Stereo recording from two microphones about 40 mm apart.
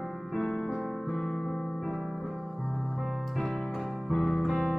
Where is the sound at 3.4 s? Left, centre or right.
Centre.